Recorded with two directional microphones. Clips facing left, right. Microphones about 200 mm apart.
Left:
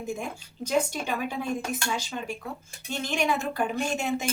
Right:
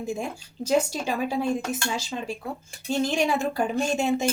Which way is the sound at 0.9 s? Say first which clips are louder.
Right 3 dB; 30° right (ahead or behind).